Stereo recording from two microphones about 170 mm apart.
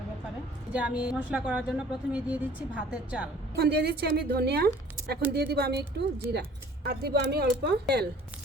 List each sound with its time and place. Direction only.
0.7 s a woman's voice: 5° right (ahead or behind)
3.5 s a woman's voice: 70° right (ahead or behind)